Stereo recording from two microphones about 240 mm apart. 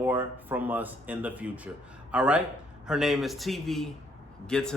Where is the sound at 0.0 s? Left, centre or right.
Centre.